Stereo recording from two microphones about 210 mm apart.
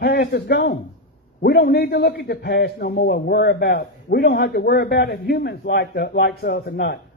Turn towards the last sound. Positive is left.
turn(degrees=50)  # may be behind; listen again after turning